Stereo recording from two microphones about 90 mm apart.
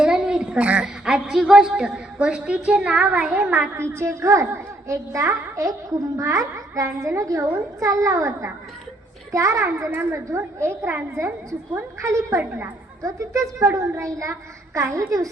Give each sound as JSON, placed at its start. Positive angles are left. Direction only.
{"t": 0.0, "sound": "a woman's voice", "side_deg": -5}
{"t": 3.8, "sound": "a woman's voice", "side_deg": -30}